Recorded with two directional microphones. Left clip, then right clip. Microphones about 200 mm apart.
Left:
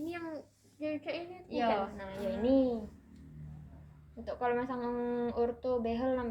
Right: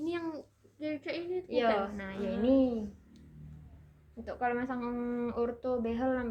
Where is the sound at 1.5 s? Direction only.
35° right (ahead or behind).